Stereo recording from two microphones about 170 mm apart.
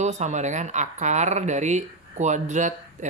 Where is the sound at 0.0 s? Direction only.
45° right (ahead or behind).